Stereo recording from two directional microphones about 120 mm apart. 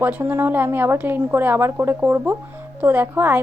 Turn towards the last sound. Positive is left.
turn(degrees=-15)  # may be behind; listen again after turning